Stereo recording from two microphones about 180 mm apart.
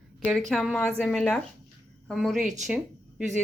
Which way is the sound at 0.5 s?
Centre (ahead or behind).